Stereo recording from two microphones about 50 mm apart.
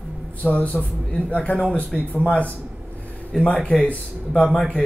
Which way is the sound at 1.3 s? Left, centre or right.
Left.